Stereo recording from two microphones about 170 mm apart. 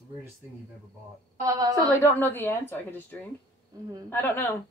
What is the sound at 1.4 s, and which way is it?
Speech, 20° right (ahead or behind).